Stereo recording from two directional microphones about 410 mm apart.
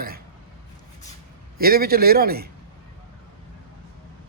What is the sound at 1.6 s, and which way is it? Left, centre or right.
Speech, right.